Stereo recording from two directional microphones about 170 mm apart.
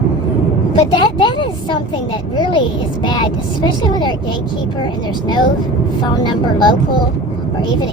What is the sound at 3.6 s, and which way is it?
Speech, 25° left (ahead or behind).